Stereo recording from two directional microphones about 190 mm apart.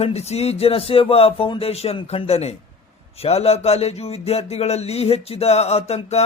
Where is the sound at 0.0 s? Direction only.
35° left (ahead or behind).